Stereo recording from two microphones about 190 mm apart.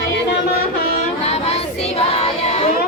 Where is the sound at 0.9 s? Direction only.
35° left (ahead or behind).